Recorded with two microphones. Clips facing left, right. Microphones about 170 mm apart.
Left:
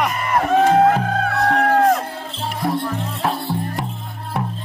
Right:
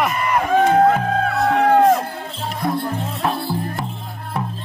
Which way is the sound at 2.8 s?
30° right (ahead or behind).